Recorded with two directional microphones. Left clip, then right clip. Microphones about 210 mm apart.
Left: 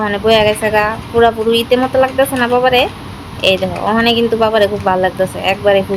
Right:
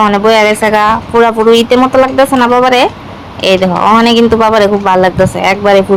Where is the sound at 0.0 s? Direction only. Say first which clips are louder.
Right 5 dB; 20° right (ahead or behind).